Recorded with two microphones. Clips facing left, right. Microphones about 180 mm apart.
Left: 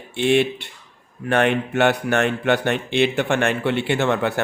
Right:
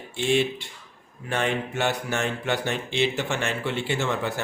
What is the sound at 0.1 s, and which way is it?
A man's voice, 65° left (ahead or behind).